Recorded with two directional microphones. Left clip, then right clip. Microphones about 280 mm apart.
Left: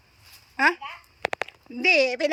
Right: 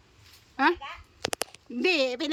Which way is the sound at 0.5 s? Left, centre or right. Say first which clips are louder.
Left 3 dB; centre.